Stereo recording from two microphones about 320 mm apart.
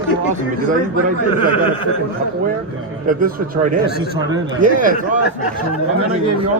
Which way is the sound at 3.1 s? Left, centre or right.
Right.